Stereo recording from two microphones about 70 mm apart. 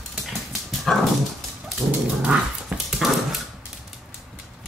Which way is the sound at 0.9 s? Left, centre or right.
Centre.